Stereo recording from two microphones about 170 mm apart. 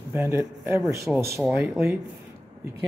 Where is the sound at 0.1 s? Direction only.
15° right (ahead or behind).